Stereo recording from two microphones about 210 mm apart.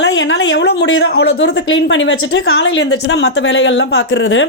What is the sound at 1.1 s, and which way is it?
A woman's voice, 70° left (ahead or behind).